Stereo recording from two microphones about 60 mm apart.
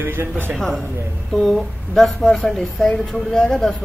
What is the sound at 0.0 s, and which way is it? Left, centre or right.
Speech, right.